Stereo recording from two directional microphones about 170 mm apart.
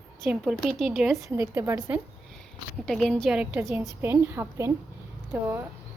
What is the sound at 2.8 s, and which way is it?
A woman's voice, centre (ahead or behind).